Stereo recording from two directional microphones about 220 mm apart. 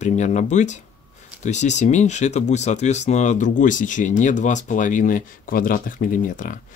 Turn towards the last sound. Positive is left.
turn(degrees=40)  # may be behind; listen again after turning